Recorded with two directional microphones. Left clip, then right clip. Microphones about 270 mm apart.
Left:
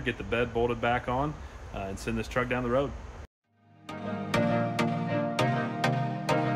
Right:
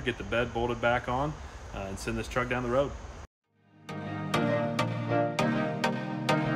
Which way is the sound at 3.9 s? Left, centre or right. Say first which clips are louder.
Left 1 dB; right.